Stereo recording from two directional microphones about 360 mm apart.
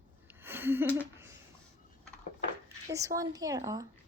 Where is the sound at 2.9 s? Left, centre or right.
Centre.